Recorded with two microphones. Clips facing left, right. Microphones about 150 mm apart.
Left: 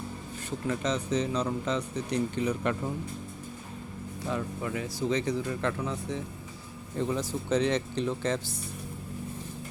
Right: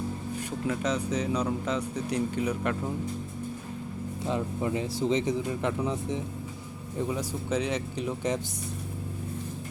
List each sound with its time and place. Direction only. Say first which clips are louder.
0.7 s speech: even; 10° right (ahead or behind)
4.3 s speech: right 3 dB; 20° right (ahead or behind)